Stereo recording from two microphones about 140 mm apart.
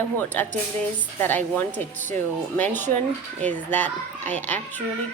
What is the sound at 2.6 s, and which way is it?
Speech, 15° left (ahead or behind).